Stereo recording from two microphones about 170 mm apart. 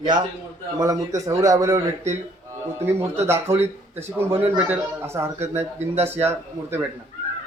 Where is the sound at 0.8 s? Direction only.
20° right (ahead or behind).